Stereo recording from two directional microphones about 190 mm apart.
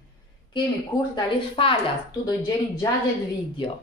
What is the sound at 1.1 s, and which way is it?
Speech, 30° left (ahead or behind).